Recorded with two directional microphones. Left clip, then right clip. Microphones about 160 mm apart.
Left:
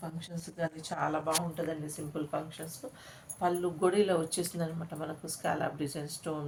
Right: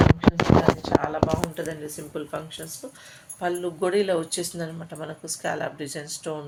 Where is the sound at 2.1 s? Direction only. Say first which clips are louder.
Right 3 dB; 60° right (ahead or behind).